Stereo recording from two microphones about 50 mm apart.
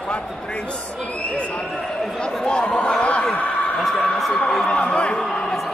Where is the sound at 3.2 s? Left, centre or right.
Centre.